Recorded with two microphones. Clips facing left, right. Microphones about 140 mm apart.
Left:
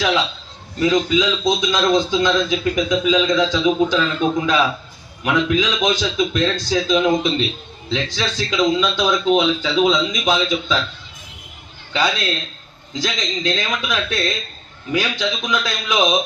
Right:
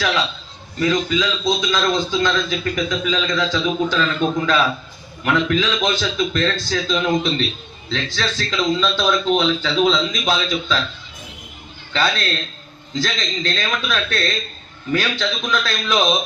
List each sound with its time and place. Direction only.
0.8 s a man's voice: 20° left (ahead or behind)
11.9 s a man's voice: 10° left (ahead or behind)